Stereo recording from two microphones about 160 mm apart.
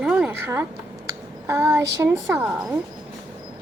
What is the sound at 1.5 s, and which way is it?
Child singing, 15° right (ahead or behind).